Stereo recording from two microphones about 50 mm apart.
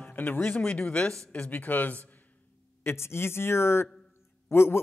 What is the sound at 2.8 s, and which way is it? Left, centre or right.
Speech, left.